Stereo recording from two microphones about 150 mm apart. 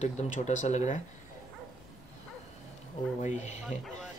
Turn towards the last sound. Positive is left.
turn(degrees=0)  # may be behind; listen again after turning